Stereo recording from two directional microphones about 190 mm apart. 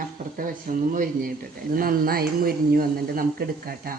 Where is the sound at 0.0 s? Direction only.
45° right (ahead or behind).